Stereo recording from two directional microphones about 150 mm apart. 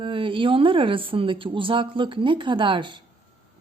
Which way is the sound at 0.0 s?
35° right (ahead or behind).